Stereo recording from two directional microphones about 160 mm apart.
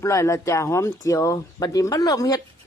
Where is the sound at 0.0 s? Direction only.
20° left (ahead or behind).